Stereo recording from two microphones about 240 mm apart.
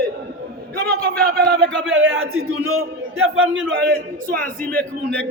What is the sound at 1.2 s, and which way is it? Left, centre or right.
A man's voice, right.